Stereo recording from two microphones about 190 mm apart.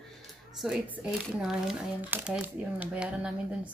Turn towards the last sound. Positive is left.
turn(degrees=-5)  # may be behind; listen again after turning